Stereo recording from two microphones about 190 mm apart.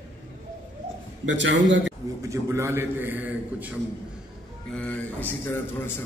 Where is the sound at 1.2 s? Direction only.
70° right (ahead or behind).